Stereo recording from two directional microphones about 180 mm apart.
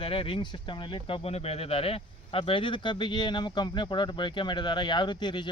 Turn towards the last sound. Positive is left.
turn(degrees=25)  # may be behind; listen again after turning